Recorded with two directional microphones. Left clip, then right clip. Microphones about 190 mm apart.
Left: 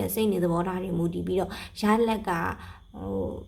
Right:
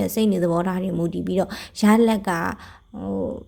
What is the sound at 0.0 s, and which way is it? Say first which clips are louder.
Speech: right 4 dB; 35° right (ahead or behind).